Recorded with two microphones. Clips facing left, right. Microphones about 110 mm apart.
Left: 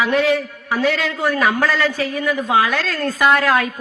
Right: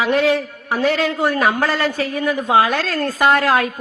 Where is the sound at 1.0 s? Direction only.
20° right (ahead or behind).